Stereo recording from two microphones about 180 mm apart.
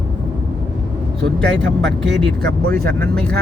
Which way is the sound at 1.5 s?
85° right.